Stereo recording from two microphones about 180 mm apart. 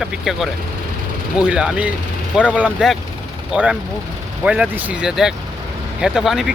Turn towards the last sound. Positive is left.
turn(degrees=-5)  # may be behind; listen again after turning